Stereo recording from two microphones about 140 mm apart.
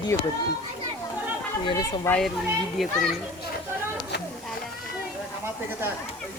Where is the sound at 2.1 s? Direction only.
15° left (ahead or behind).